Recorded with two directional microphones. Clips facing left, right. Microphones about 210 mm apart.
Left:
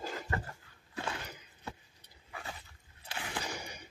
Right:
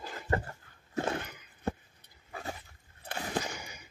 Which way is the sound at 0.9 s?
45° right (ahead or behind).